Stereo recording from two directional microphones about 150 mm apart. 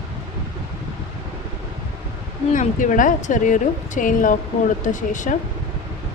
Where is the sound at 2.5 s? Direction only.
60° left (ahead or behind).